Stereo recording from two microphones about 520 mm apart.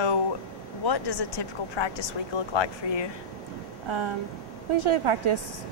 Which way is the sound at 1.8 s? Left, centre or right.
Left.